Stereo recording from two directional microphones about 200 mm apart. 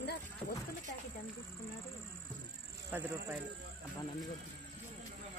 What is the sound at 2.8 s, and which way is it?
Speech, 10° right (ahead or behind).